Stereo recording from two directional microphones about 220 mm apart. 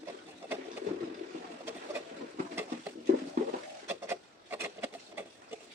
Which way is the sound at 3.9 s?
10° right (ahead or behind).